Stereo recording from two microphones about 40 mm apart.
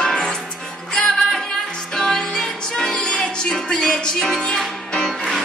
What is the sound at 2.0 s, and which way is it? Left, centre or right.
Music, centre.